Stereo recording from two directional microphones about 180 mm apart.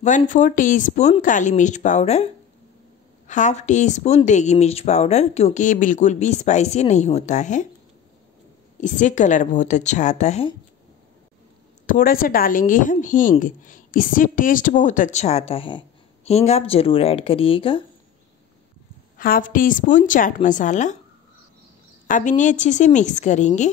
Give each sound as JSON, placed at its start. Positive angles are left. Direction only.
{"t": 0.0, "sound": "a woman's voice", "side_deg": 45}
{"t": 8.8, "sound": "a woman's voice", "side_deg": 45}
{"t": 11.8, "sound": "a woman's voice", "side_deg": 50}
{"t": 19.1, "sound": "a woman's voice", "side_deg": 50}
{"t": 22.0, "sound": "a woman's voice", "side_deg": 45}